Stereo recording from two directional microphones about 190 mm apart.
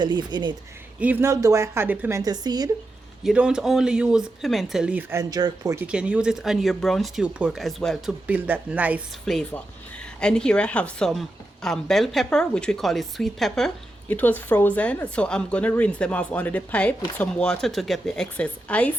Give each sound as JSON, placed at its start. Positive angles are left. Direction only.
{"t": 0.0, "sound": "speech", "side_deg": -25}
{"t": 0.9, "sound": "a woman's voice", "side_deg": -10}
{"t": 3.2, "sound": "a woman's voice", "side_deg": -5}
{"t": 5.3, "sound": "speech", "side_deg": -20}
{"t": 5.8, "sound": "a woman's voice", "side_deg": -5}
{"t": 8.3, "sound": "a woman's voice", "side_deg": -10}
{"t": 9.2, "sound": "a woman's voice", "side_deg": 5}